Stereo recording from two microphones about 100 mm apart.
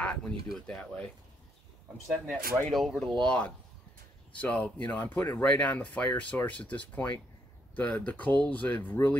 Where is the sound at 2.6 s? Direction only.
5° left (ahead or behind).